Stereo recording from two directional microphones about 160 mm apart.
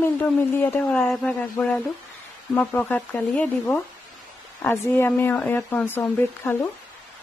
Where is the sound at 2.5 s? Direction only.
10° left (ahead or behind).